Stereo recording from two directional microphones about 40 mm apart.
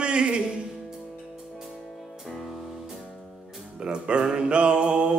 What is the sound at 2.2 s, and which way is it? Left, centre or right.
Music, centre.